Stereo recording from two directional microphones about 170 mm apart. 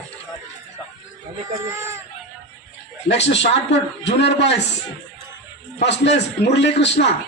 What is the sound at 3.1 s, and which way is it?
A man's voice, 90° left.